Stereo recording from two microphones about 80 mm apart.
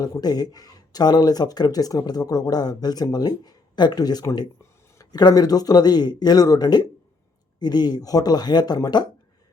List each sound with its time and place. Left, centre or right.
0.0 s speech: left